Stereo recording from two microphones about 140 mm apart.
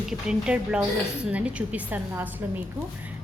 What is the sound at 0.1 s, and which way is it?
A woman's voice, 5° right (ahead or behind).